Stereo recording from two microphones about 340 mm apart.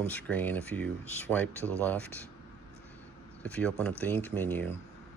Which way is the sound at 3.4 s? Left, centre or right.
Centre.